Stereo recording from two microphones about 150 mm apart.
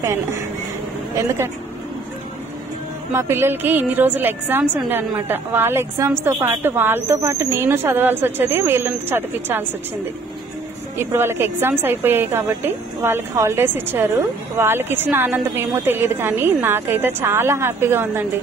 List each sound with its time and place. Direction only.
1.1 s a woman's voice: 20° right (ahead or behind)
3.1 s a woman's voice: 15° right (ahead or behind)
11.0 s a woman's voice: 15° right (ahead or behind)